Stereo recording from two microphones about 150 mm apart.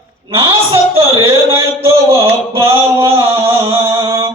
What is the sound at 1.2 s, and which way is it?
Music, 20° right (ahead or behind).